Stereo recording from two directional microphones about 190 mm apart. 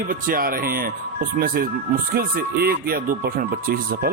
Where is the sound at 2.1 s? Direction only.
50° right (ahead or behind).